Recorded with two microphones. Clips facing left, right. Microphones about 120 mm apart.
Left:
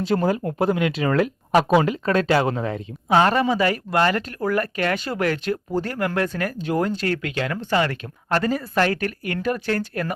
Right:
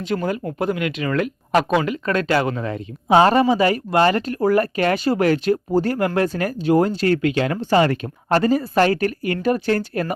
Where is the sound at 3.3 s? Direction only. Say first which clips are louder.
Right 4 dB; 5° right (ahead or behind).